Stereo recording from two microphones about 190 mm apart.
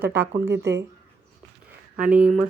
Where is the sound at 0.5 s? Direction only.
65° right (ahead or behind).